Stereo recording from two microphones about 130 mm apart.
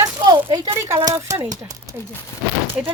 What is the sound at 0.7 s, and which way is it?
Speech, 20° right (ahead or behind).